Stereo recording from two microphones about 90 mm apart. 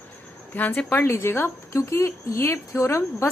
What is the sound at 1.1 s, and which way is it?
A woman's voice, 30° left (ahead or behind).